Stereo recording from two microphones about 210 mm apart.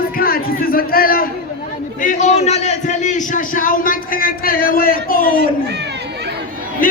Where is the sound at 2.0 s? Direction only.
35° left (ahead or behind).